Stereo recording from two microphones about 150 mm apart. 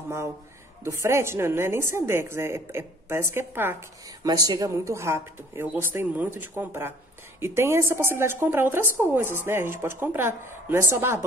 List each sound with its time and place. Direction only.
0.8 s a woman's voice: 20° right (ahead or behind)
4.2 s a woman's voice: 25° right (ahead or behind)